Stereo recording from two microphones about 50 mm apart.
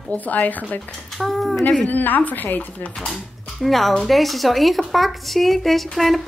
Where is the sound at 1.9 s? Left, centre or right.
Left.